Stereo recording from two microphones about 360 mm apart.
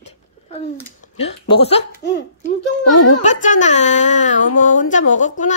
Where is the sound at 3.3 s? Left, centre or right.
Left.